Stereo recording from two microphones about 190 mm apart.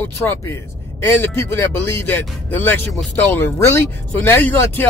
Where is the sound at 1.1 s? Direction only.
10° left (ahead or behind).